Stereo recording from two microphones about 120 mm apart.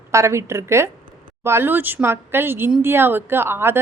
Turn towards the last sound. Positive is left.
turn(degrees=-20)  # may be behind; listen again after turning